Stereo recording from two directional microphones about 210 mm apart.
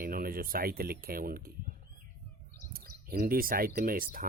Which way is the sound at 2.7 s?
45° right (ahead or behind).